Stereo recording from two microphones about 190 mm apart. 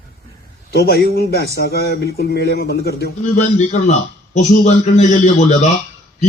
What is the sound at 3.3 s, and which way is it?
A man's voice, 40° left (ahead or behind).